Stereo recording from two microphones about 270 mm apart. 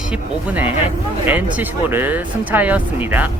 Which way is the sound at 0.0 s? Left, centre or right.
Centre.